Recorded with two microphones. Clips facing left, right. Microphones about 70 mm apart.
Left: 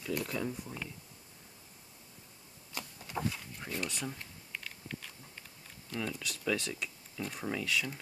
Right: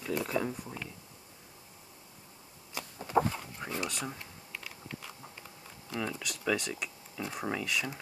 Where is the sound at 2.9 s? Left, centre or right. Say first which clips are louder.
Right 9 dB; right.